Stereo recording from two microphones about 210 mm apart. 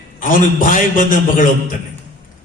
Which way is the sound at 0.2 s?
40° left (ahead or behind).